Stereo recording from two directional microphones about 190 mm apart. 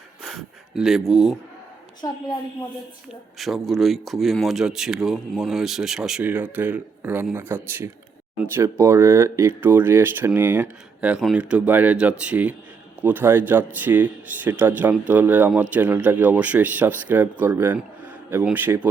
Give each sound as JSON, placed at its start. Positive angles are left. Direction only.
{"t": 0.2, "sound": "speech", "side_deg": 0}
{"t": 2.0, "sound": "a woman's voice", "side_deg": 20}
{"t": 3.3, "sound": "speech", "side_deg": 0}